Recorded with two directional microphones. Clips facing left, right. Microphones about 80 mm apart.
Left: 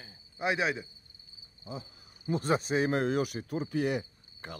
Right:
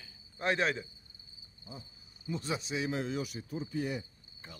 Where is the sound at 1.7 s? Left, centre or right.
Left.